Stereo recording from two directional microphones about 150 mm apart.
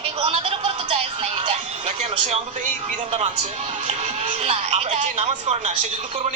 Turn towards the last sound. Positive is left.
turn(degrees=-45)  # may be behind; listen again after turning